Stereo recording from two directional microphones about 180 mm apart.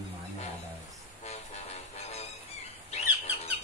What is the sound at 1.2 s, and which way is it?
Music, 35° left (ahead or behind).